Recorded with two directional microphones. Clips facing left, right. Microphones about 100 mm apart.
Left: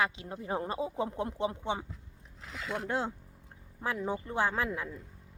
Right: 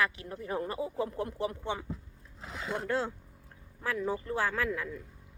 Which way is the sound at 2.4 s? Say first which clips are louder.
Right 1 dB; 35° right (ahead or behind).